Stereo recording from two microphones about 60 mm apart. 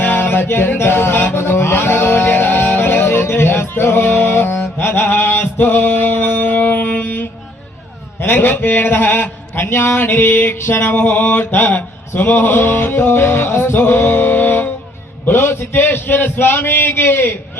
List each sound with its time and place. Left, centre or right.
0.0 s mantra: left
5.0 s a sound: left
8.2 s speech: left